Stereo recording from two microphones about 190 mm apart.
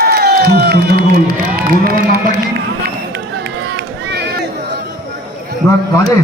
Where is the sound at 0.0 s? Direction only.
55° right (ahead or behind).